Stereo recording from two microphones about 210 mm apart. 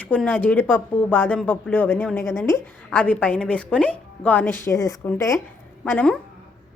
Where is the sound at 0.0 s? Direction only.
5° left (ahead or behind).